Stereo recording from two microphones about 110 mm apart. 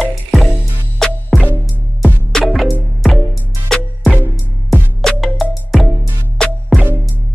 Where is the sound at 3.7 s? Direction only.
5° left (ahead or behind).